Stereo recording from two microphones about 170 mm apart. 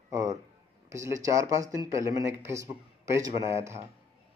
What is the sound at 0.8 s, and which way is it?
Speech, 20° right (ahead or behind).